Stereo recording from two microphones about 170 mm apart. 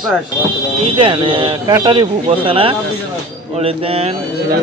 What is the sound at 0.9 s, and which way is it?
Speech, 30° right (ahead or behind).